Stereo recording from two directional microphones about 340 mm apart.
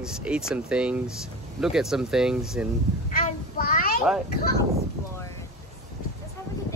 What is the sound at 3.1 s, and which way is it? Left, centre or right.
Child singing, left.